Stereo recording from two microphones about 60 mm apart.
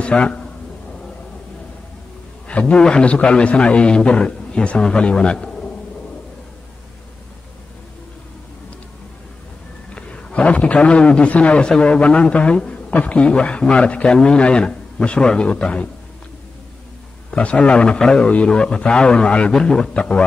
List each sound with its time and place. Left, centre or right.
0.0 s a sound: centre
2.7 s a man's voice: centre
9.9 s a man's voice: centre
17.3 s a man's voice: centre